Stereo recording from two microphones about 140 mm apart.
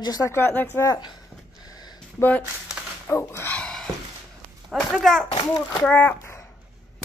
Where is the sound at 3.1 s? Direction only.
15° left (ahead or behind).